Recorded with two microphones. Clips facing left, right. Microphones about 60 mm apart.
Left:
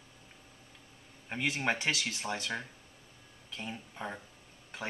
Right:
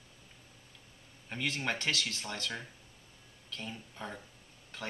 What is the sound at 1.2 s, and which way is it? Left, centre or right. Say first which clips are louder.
Speech: left 3 dB; centre.